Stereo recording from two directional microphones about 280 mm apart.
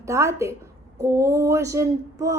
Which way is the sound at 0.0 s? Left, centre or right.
Centre.